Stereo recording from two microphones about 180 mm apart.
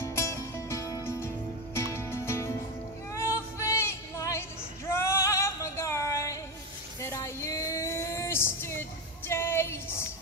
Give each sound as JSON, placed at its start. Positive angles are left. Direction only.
{"t": 0.0, "sound": "music", "side_deg": 15}
{"t": 7.0, "sound": "a sound", "side_deg": 15}
{"t": 9.3, "sound": "music", "side_deg": 15}